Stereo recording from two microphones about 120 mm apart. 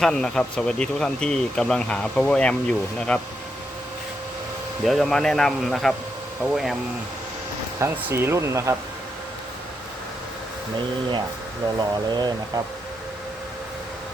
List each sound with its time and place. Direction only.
0.0 s speech: 5° left (ahead or behind)
4.9 s speech: centre (ahead or behind)
7.8 s speech: 20° right (ahead or behind)
11.8 s speech: 35° right (ahead or behind)